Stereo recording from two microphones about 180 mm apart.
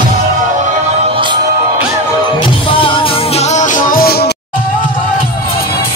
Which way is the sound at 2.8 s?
35° left (ahead or behind).